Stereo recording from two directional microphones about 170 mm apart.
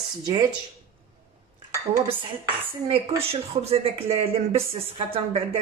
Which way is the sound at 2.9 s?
35° right (ahead or behind).